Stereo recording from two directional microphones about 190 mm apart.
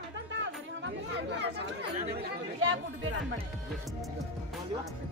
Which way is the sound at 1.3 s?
65° right (ahead or behind).